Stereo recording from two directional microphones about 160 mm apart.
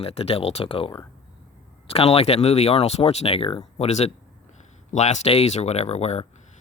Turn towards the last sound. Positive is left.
turn(degrees=40)  # may be behind; listen again after turning